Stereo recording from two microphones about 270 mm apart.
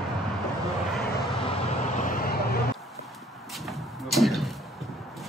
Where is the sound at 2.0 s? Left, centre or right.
Left.